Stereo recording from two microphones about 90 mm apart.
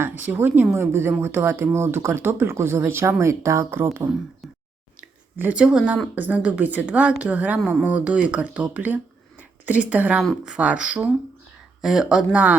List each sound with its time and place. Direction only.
0.0 s speech: 20° right (ahead or behind)
4.9 s a sound: 15° right (ahead or behind)
6.1 s a woman's voice: 15° right (ahead or behind)